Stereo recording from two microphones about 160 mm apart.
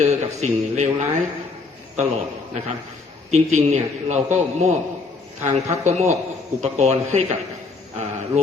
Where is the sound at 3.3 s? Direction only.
45° right (ahead or behind).